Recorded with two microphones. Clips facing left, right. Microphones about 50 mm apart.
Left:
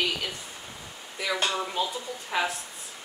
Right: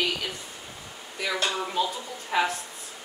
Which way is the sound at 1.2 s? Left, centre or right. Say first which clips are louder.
Even; centre.